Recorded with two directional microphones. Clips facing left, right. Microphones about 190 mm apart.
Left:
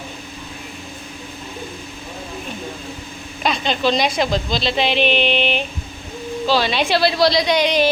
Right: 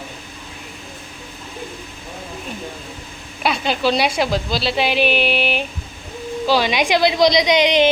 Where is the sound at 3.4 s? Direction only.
10° right (ahead or behind).